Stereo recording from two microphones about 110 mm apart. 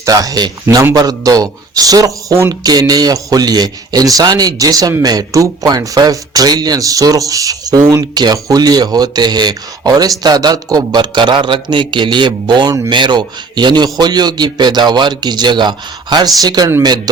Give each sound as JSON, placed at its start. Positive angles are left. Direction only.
{"t": 0.0, "sound": "a man's voice", "side_deg": -35}